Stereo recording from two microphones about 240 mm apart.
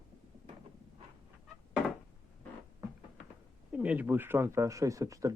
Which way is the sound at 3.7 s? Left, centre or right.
Centre.